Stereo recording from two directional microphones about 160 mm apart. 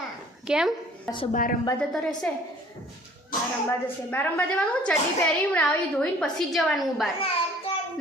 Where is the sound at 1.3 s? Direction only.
60° left (ahead or behind).